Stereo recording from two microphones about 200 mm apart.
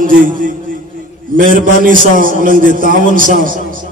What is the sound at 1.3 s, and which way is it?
A man's voice, 45° right (ahead or behind).